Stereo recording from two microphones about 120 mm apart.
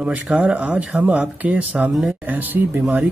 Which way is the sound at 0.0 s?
10° right (ahead or behind).